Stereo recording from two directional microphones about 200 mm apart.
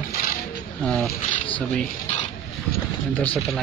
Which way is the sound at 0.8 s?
5° left (ahead or behind).